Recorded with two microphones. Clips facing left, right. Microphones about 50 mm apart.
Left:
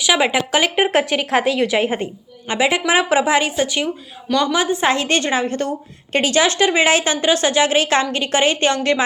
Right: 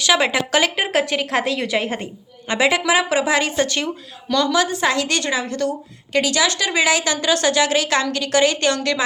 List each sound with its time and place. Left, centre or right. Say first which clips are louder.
0.0 s a woman's voice: left 1 dB; centre; by 9.0 s left